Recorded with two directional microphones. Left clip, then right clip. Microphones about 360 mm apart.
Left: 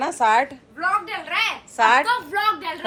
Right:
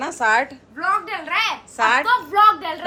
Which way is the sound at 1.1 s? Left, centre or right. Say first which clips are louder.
Right 2 dB; right.